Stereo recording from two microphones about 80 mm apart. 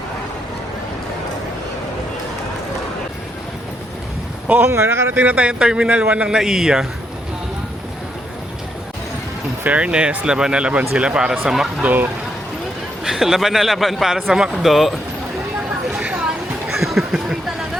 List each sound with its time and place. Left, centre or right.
4.4 s speech: right
5.2 s speech: centre
9.6 s speech: centre
13.1 s a man's voice: centre
15.9 s a sound: centre
16.7 s chatter: centre